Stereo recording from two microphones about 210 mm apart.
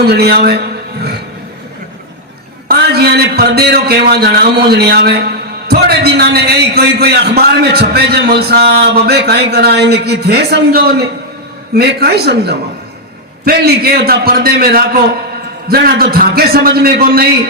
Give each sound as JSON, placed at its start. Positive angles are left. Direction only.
{"t": 0.0, "sound": "a man's voice", "side_deg": -50}
{"t": 2.6, "sound": "a man's voice", "side_deg": -50}